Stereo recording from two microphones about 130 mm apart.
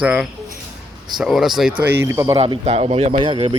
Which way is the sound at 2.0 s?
20° right (ahead or behind).